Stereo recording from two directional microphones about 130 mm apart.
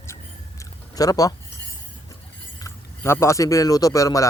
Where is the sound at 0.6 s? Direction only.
30° left (ahead or behind).